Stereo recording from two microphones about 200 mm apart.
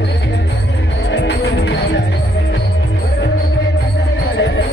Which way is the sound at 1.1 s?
60° left (ahead or behind).